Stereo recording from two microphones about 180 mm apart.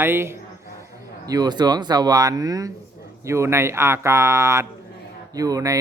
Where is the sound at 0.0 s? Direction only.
15° right (ahead or behind).